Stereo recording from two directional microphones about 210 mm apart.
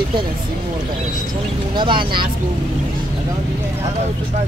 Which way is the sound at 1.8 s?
20° right (ahead or behind).